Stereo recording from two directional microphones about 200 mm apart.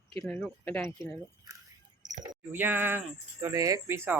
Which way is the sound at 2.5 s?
10° right (ahead or behind).